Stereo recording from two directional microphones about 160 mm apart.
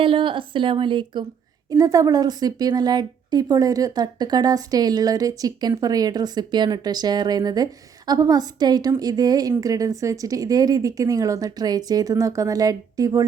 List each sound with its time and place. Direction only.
0.0 s a woman's voice: 35° right (ahead or behind)